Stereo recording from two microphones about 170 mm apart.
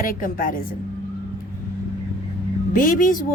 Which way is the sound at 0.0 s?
55° left (ahead or behind).